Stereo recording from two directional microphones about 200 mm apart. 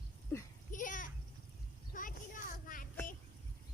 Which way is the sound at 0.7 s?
40° left (ahead or behind).